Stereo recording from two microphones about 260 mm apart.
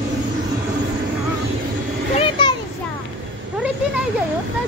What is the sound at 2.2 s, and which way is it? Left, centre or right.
Children playing, centre.